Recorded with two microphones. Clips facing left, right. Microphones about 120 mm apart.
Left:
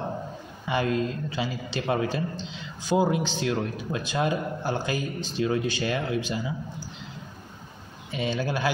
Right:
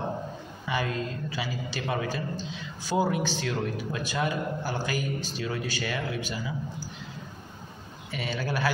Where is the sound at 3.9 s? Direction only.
30° left (ahead or behind).